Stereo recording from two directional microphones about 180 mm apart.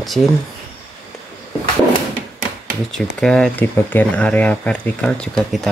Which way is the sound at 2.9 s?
5° left (ahead or behind).